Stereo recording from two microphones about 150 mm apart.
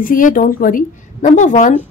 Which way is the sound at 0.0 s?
65° left (ahead or behind).